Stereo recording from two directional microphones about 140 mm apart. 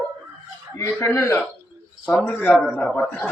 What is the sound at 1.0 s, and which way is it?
Speech, 20° left (ahead or behind).